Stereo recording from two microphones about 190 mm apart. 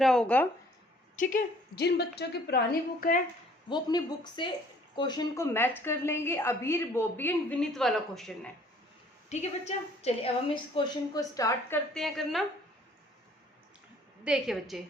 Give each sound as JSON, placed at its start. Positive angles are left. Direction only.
{"t": 0.0, "sound": "a woman's voice", "side_deg": 5}
{"t": 1.1, "sound": "a woman's voice", "side_deg": 45}
{"t": 3.7, "sound": "a woman's voice", "side_deg": 20}
{"t": 9.3, "sound": "a woman's voice", "side_deg": 35}
{"t": 11.9, "sound": "a woman's voice", "side_deg": 0}
{"t": 14.3, "sound": "a woman's voice", "side_deg": 0}